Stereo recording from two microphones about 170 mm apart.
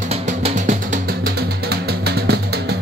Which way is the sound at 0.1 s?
40° right (ahead or behind).